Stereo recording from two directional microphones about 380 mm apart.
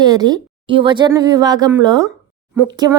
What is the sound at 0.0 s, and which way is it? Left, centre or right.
Speech, centre.